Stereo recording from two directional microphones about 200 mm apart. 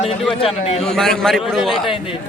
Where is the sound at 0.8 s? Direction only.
Centre (ahead or behind).